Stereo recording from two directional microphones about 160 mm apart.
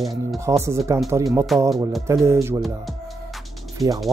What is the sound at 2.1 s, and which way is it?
Speech, 15° right (ahead or behind).